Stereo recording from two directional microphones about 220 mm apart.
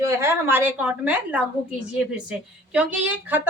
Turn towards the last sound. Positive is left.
turn(degrees=-10)  # may be behind; listen again after turning